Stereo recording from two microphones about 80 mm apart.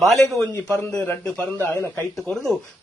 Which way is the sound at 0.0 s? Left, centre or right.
Centre.